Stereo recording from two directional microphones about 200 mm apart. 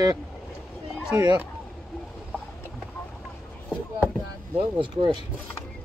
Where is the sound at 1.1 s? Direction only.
20° right (ahead or behind).